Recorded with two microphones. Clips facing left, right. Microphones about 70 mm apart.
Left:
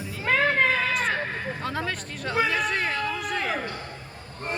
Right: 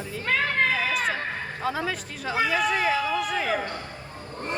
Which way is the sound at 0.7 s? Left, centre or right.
Centre.